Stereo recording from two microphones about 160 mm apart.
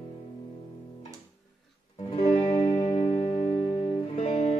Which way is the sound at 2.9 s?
50° left (ahead or behind).